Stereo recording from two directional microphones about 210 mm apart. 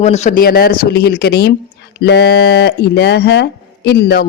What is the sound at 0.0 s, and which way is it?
Speech, 30° left (ahead or behind).